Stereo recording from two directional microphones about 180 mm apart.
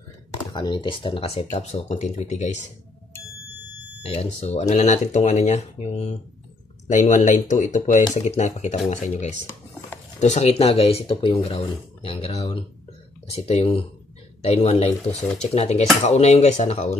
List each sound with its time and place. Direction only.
0.5 s speech: 25° left (ahead or behind)
4.0 s speech: 35° left (ahead or behind)